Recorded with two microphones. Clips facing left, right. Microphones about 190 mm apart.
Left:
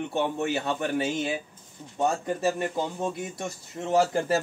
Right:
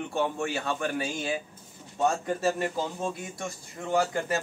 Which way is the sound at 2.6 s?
20° left (ahead or behind).